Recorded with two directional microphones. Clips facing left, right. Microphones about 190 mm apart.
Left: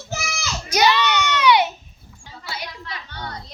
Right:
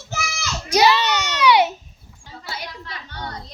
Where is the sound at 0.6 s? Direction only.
35° right (ahead or behind).